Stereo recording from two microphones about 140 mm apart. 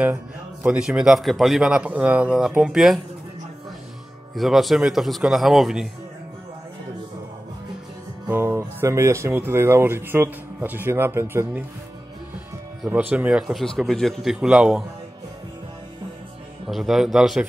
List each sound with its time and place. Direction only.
0.7 s speech: 5° right (ahead or behind)
4.4 s speech: centre (ahead or behind)
8.3 s speech: 15° right (ahead or behind)
12.8 s speech: 10° right (ahead or behind)
16.6 s speech: centre (ahead or behind)